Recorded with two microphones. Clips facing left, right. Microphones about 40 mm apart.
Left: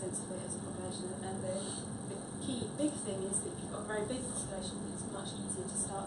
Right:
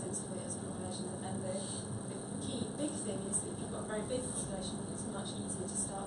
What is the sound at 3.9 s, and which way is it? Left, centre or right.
Speech, centre.